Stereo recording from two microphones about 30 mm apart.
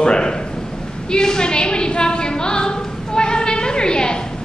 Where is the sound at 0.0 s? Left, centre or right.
Left.